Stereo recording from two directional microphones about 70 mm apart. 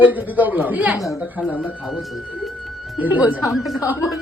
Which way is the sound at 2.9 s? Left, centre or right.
Right.